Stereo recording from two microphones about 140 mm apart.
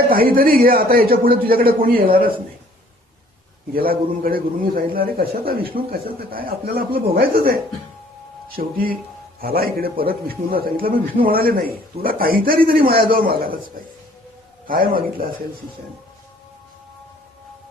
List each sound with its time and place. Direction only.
0.1 s a man's voice: 90° right
3.8 s a man's voice: 90° right
14.7 s a man's voice: 90° right